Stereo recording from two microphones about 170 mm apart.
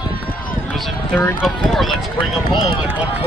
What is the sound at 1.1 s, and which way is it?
Speech, 10° left (ahead or behind).